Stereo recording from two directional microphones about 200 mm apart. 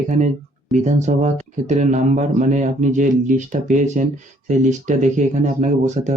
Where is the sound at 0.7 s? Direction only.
35° right (ahead or behind).